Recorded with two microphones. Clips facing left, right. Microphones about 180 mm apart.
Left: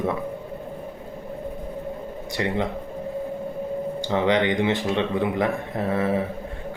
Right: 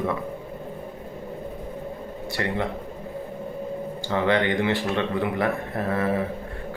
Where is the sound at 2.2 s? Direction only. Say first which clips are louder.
Left 2 dB; 20° left (ahead or behind).